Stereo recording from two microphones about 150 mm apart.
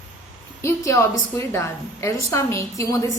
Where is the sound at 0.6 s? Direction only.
20° left (ahead or behind).